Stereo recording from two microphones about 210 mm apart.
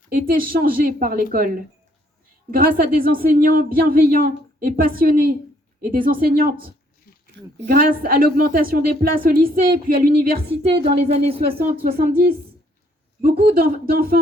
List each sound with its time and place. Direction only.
0.1 s speech: 40° right (ahead or behind)
10.7 s speech: 25° right (ahead or behind)
11.5 s speech: 45° right (ahead or behind)